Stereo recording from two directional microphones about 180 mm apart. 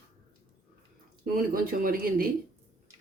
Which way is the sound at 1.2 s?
50° right (ahead or behind).